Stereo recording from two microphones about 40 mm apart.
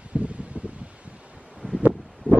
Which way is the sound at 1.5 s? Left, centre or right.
Centre.